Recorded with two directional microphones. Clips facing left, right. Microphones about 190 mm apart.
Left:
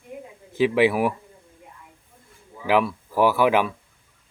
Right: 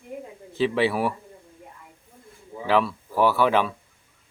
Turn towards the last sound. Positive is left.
turn(degrees=10)  # may be behind; listen again after turning